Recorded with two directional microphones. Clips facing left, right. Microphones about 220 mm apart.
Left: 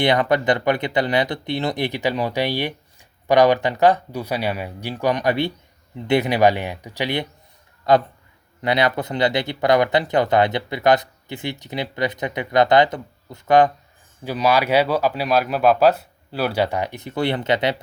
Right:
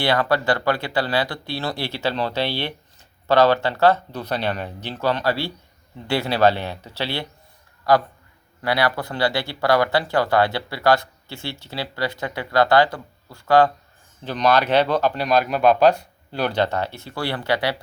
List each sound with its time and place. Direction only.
0.0 s speech: 20° left (ahead or behind)
14.2 s speech: 5° left (ahead or behind)